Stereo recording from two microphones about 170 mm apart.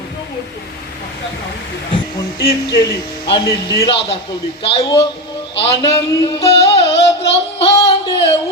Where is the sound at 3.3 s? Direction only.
30° left (ahead or behind).